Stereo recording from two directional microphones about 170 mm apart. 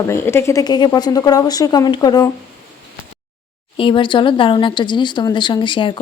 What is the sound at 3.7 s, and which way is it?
Speech, 30° left (ahead or behind).